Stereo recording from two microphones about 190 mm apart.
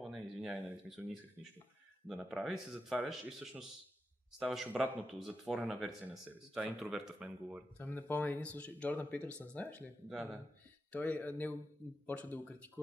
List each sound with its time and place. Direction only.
0.0 s a sound: 5° right (ahead or behind)
2.0 s speech: 5° right (ahead or behind)
7.8 s speech: 10° left (ahead or behind)
10.9 s speech: 10° left (ahead or behind)